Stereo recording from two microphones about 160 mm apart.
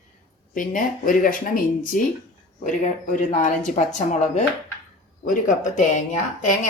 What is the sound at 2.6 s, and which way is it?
Speech, 50° left (ahead or behind).